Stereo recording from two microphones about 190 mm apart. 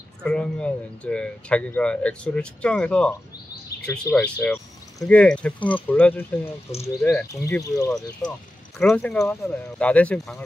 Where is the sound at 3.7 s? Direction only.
55° left (ahead or behind).